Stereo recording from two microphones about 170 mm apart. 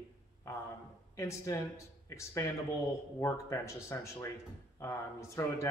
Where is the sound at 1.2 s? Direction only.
20° left (ahead or behind).